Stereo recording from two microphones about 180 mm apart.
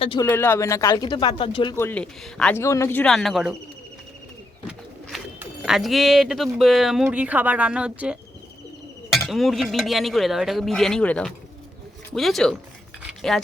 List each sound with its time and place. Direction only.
0.0 s speech: 30° left (ahead or behind)
0.3 s speech: 15° left (ahead or behind)
1.7 s speech: 10° left (ahead or behind)
5.4 s speech: 5° right (ahead or behind)
13.1 s a sound: centre (ahead or behind)